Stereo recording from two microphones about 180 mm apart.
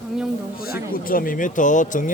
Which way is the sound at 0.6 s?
55° left (ahead or behind).